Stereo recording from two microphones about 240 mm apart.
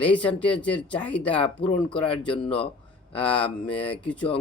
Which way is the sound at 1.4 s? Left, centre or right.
Left.